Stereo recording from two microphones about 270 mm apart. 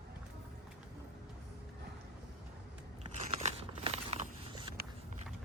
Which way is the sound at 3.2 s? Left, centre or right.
Right.